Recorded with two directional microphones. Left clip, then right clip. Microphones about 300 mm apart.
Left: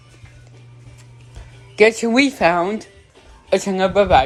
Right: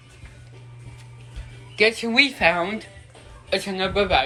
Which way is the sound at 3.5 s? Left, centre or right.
Left.